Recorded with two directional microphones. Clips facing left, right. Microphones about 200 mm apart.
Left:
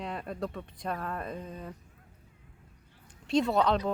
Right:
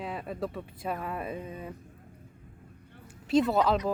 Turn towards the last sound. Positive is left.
turn(degrees=-5)  # may be behind; listen again after turning